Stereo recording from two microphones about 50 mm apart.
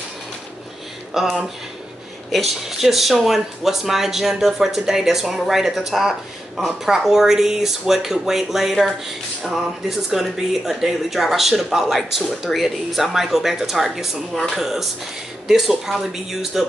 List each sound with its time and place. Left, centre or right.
1.1 s speech: centre
2.3 s speech: centre